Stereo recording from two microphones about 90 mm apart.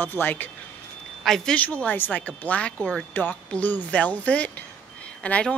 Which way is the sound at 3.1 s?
20° left (ahead or behind).